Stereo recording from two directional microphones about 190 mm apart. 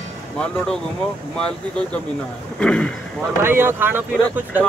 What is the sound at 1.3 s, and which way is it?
Speech, 5° left (ahead or behind).